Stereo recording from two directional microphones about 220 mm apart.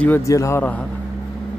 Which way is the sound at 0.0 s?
10° left (ahead or behind).